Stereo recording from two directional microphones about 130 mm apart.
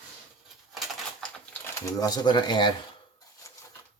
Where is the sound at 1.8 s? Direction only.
30° left (ahead or behind).